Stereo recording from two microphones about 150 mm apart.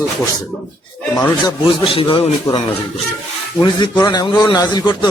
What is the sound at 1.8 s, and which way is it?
Speech, 35° left (ahead or behind).